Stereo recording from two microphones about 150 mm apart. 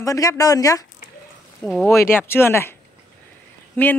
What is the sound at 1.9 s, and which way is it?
Speech, 15° left (ahead or behind).